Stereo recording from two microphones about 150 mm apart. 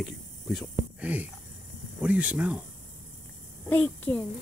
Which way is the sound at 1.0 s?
10° right (ahead or behind).